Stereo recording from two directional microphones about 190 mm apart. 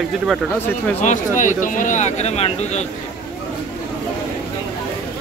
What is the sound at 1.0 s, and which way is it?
Speech, 40° left (ahead or behind).